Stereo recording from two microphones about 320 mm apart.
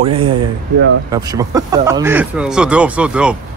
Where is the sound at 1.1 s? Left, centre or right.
Centre.